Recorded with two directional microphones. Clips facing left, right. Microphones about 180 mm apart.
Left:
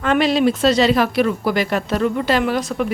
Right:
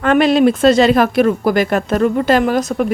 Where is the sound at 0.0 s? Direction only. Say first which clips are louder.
Right 5 dB; 55° right (ahead or behind).